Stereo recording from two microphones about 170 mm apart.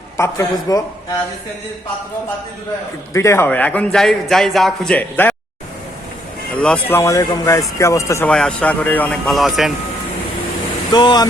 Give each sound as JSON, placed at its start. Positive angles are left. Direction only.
{"t": 0.2, "sound": "a man's voice", "side_deg": 15}
{"t": 3.1, "sound": "a man's voice", "side_deg": 15}
{"t": 6.6, "sound": "a man's voice", "side_deg": 10}
{"t": 8.3, "sound": "speech", "side_deg": 5}
{"t": 10.9, "sound": "speech", "side_deg": 25}